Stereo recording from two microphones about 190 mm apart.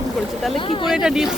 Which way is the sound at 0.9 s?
5° right (ahead or behind).